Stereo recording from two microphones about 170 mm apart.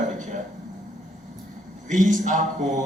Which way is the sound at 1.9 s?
50° right (ahead or behind).